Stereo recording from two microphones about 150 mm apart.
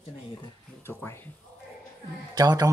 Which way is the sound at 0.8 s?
15° left (ahead or behind).